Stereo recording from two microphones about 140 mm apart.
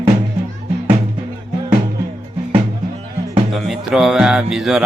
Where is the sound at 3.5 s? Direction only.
Centre (ahead or behind).